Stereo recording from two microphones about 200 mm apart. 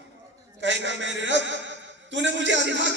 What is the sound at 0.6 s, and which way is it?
Speech, 65° right (ahead or behind).